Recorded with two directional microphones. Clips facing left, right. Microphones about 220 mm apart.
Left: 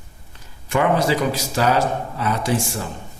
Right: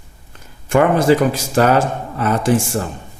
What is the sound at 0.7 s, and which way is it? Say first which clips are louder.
Speech: right 6 dB; 50° right (ahead or behind).